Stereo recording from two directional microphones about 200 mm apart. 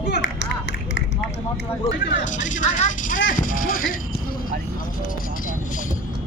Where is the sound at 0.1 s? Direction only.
60° left (ahead or behind).